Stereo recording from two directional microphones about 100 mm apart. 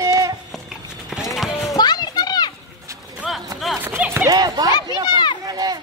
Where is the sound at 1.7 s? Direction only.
45° left (ahead or behind).